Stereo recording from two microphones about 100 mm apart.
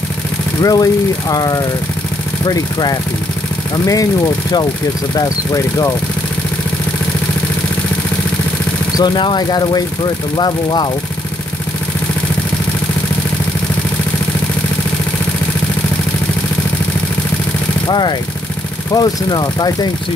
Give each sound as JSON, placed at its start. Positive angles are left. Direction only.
{"t": 0.6, "sound": "speech", "side_deg": 40}
{"t": 8.9, "sound": "speech", "side_deg": 50}
{"t": 17.8, "sound": "speech", "side_deg": 45}